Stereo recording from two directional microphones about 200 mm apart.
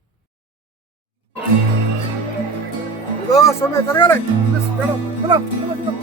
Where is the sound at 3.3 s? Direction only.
15° left (ahead or behind).